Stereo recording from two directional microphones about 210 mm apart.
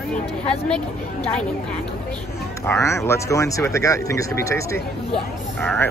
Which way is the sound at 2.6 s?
10° left (ahead or behind).